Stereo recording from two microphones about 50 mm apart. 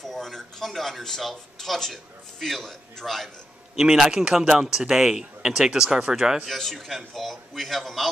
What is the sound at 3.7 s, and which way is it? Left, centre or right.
Speech, centre.